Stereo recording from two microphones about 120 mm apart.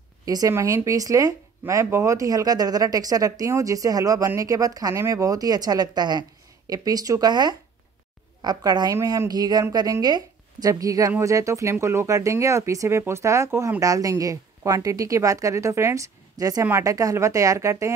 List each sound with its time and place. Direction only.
0.2 s a woman's voice: 30° right (ahead or behind)